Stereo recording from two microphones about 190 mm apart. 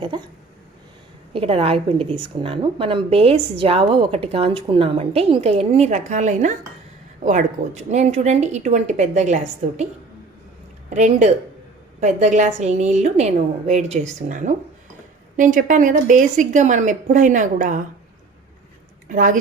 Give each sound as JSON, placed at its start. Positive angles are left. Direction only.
{"t": 0.1, "sound": "speech", "side_deg": -25}
{"t": 1.3, "sound": "a woman's voice", "side_deg": -30}
{"t": 10.8, "sound": "a woman's voice", "side_deg": -35}
{"t": 19.0, "sound": "a woman's voice", "side_deg": -45}